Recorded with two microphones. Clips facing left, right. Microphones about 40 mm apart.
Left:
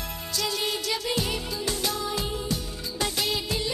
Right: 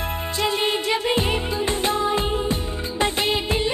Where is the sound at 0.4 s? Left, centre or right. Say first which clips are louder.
Right 6 dB; right.